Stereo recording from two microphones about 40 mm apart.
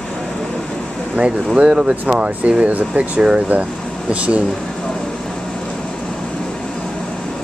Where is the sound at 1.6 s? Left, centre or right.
Right.